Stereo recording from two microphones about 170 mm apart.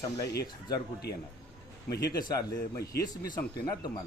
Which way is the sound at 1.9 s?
70° left (ahead or behind).